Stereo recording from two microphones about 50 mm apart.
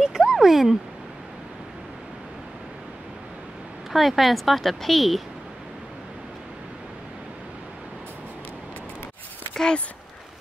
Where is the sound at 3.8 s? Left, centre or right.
Centre.